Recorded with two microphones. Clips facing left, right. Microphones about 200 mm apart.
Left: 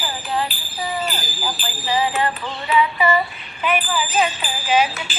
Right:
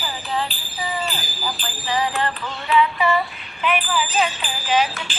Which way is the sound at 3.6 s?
5° left (ahead or behind).